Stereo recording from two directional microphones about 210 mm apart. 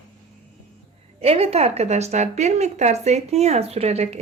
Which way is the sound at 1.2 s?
30° right (ahead or behind).